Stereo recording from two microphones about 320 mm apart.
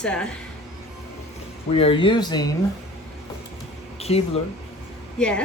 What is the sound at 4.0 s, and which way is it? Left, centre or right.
Speech, centre.